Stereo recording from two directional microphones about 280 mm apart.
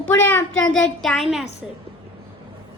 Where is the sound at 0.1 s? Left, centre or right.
Centre.